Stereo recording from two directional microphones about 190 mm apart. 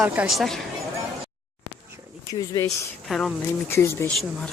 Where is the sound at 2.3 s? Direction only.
20° left (ahead or behind).